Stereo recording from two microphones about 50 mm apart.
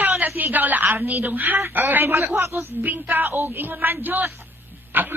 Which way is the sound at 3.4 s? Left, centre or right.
Right.